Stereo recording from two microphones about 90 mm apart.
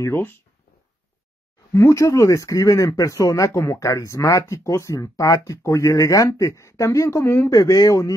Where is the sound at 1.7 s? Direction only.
35° left (ahead or behind).